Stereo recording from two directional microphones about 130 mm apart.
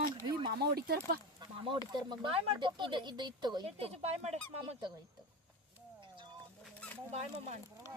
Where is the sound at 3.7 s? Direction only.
50° right (ahead or behind).